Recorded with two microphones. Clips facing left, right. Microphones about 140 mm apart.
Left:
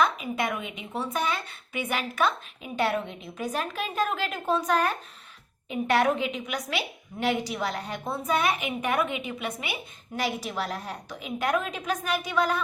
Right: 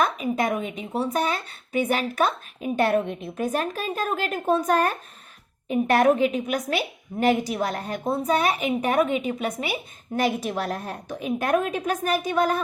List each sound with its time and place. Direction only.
0.0 s a woman's voice: 40° right (ahead or behind)
2.7 s a woman's voice: 50° right (ahead or behind)
10.2 s a woman's voice: 50° right (ahead or behind)